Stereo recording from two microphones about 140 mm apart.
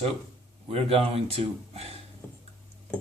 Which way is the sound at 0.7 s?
45° right (ahead or behind).